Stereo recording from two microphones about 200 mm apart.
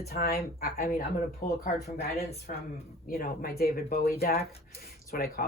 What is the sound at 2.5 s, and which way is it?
A woman's voice, 40° left (ahead or behind).